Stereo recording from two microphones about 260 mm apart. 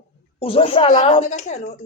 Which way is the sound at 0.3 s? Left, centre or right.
Left.